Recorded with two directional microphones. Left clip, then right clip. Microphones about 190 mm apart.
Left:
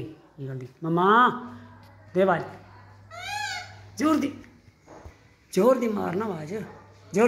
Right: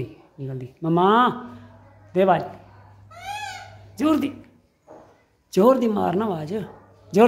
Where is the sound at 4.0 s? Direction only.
15° right (ahead or behind).